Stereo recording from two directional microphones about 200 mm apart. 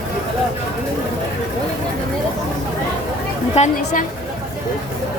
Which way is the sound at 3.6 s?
40° left (ahead or behind).